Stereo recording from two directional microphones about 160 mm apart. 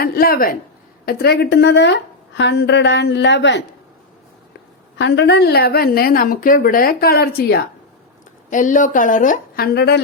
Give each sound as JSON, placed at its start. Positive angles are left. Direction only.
{"t": 0.0, "sound": "speech", "side_deg": 70}
{"t": 1.0, "sound": "a woman's voice", "side_deg": 90}
{"t": 4.9, "sound": "a woman's voice", "side_deg": 90}
{"t": 8.4, "sound": "a woman's voice", "side_deg": 55}
{"t": 9.7, "sound": "a woman's voice", "side_deg": 90}